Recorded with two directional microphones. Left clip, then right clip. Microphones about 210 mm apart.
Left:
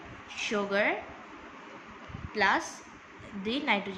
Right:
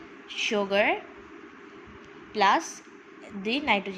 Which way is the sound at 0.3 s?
20° right (ahead or behind).